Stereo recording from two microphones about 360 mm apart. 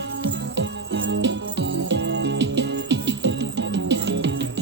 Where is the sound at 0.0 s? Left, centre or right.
Right.